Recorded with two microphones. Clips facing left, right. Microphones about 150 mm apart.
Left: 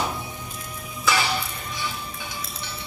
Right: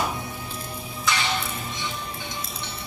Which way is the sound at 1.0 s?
5° left (ahead or behind).